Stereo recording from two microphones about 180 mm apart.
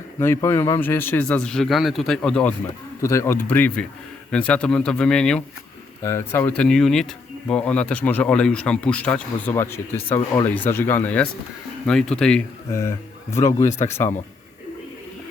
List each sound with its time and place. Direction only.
0.2 s speech: 15° left (ahead or behind)
13.4 s speech: 15° left (ahead or behind)